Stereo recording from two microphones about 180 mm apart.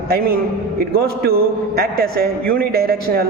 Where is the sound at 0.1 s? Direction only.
55° right (ahead or behind).